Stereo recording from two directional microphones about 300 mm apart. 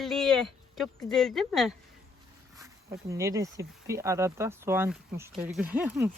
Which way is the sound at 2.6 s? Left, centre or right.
Centre.